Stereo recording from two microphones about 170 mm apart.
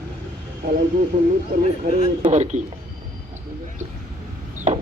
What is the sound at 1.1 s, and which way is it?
Speech, 40° right (ahead or behind).